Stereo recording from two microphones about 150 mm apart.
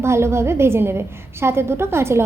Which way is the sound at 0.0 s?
15° right (ahead or behind).